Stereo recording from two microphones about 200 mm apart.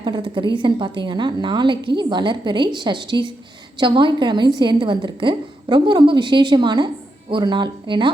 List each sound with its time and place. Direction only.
0.0 s a woman's voice: 25° right (ahead or behind)